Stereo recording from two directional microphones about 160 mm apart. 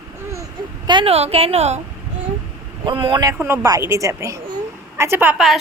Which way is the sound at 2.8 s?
30° right (ahead or behind).